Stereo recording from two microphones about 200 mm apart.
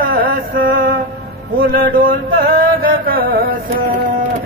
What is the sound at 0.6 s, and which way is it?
Mantra, 70° right (ahead or behind).